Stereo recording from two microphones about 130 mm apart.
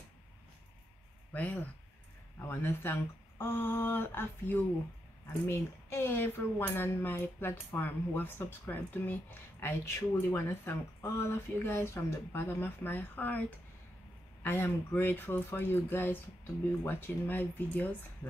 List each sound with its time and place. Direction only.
1.3 s speech: 10° left (ahead or behind)
14.4 s speech: 15° left (ahead or behind)